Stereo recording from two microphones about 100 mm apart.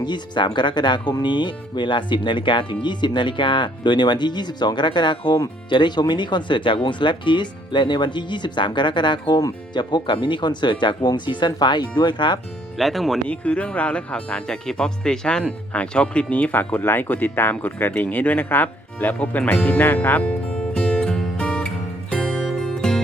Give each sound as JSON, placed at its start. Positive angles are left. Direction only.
{"t": 0.0, "sound": "speech", "side_deg": 50}
{"t": 12.7, "sound": "speech", "side_deg": 0}
{"t": 13.2, "sound": "speech", "side_deg": 10}
{"t": 22.1, "sound": "music", "side_deg": 5}